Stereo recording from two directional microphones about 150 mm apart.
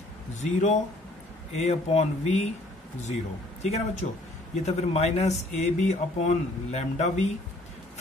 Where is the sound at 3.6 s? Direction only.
45° left (ahead or behind).